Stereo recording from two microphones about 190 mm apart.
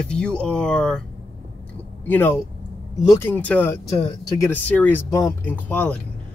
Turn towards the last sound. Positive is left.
turn(degrees=5)  # may be behind; listen again after turning